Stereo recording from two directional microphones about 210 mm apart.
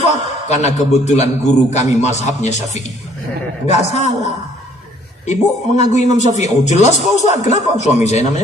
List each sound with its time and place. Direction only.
0.1 s a man's voice: 35° left (ahead or behind)
5.2 s a man's voice: 30° left (ahead or behind)